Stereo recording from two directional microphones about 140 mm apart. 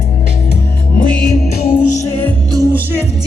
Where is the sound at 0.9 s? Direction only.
85° left.